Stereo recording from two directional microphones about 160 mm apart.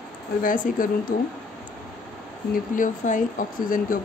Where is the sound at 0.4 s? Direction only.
60° left (ahead or behind).